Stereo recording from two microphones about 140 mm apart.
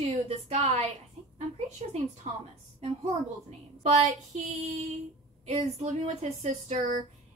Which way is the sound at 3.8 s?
50° right (ahead or behind).